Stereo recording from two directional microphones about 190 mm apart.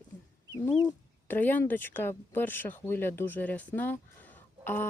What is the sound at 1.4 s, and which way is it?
Speech, 10° left (ahead or behind).